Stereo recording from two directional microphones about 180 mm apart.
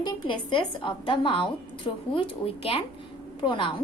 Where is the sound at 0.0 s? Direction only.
25° left (ahead or behind).